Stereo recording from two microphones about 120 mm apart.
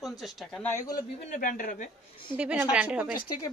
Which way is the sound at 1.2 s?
90° left.